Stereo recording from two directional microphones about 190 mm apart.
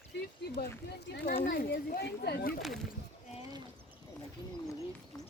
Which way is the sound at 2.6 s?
Centre (ahead or behind).